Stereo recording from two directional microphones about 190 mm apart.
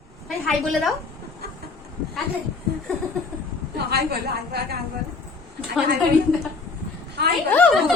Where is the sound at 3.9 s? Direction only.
60° right (ahead or behind).